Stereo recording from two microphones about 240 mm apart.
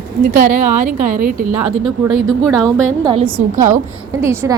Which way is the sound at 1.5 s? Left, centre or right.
Centre.